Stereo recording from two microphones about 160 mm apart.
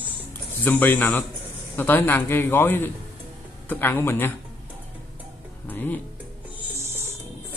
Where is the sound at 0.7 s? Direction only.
10° left (ahead or behind).